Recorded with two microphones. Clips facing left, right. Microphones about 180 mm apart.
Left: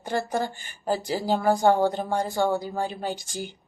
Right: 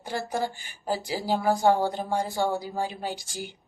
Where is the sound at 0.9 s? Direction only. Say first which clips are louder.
Left 3 dB; 10° right (ahead or behind).